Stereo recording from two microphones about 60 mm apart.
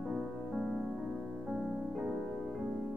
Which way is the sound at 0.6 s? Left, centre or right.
Centre.